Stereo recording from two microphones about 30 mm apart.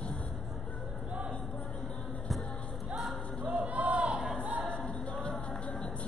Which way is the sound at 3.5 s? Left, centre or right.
Right.